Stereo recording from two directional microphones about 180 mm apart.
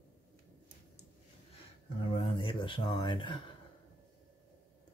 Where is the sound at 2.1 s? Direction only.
30° left (ahead or behind).